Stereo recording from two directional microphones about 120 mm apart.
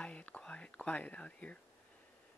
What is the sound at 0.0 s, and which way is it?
Whispering, 10° left (ahead or behind).